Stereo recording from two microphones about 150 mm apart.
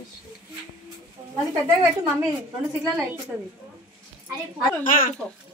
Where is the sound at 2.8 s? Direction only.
5° right (ahead or behind).